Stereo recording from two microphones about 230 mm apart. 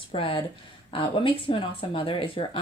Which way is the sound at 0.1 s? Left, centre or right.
Left.